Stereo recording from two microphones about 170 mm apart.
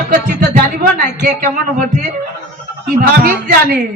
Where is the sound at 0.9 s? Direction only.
50° right (ahead or behind).